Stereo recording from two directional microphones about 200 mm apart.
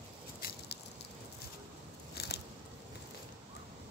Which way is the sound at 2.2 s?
50° left (ahead or behind).